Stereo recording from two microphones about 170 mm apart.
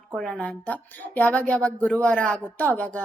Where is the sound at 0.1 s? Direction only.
5° left (ahead or behind).